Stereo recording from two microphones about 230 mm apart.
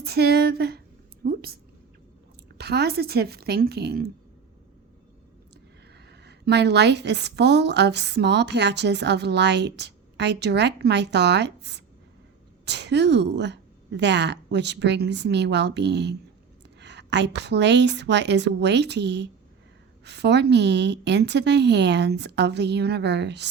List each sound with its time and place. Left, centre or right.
0.0 s a woman's voice: right
1.2 s a sound: right
2.6 s a woman's voice: right
6.1 s a woman's voice: right